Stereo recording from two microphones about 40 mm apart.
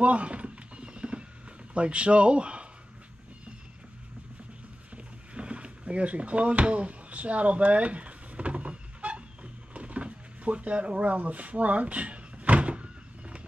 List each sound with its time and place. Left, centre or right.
0.0 s clip-clop: right
1.7 s speech: right
4.9 s a sound: right